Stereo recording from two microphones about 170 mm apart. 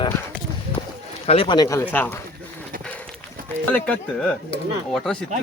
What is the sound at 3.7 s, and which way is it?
Speech, 10° left (ahead or behind).